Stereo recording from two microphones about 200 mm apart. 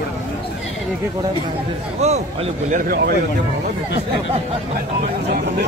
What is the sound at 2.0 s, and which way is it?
Speech, 30° right (ahead or behind).